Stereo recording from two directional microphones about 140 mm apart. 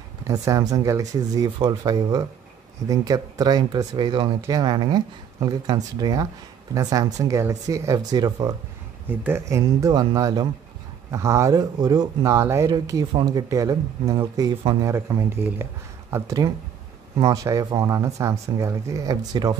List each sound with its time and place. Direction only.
0.3 s speech: 25° right (ahead or behind)